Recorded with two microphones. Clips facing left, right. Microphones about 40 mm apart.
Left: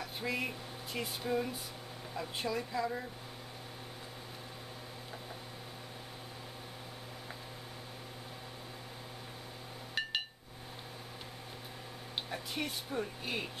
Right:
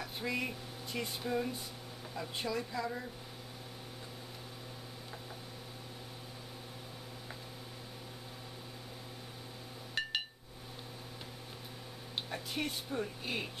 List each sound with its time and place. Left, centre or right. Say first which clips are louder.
0.0 s speech: even; centre
10.0 s a sound: even; centre
12.3 s speech: right 1 dB; centre